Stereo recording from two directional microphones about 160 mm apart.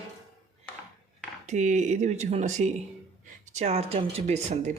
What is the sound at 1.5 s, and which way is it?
Speech, 45° right (ahead or behind).